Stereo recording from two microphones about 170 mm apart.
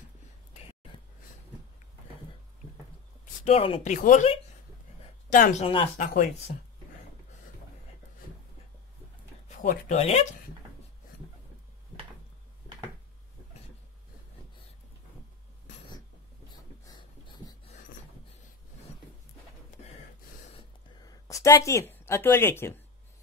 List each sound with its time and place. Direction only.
3.4 s speech: 35° left (ahead or behind)
3.9 s speech: 45° left (ahead or behind)
5.6 s speech: 35° left (ahead or behind)
5.9 s speech: 50° left (ahead or behind)
9.8 s speech: 40° left (ahead or behind)
21.0 s speech: 20° left (ahead or behind)